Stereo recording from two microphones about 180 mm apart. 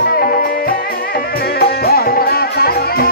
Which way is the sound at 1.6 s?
55° left (ahead or behind).